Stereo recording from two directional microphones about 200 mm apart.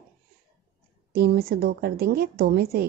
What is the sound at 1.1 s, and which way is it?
A woman's voice, 55° right (ahead or behind).